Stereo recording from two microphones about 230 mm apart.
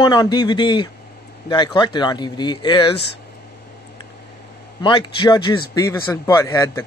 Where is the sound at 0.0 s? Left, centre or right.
Centre.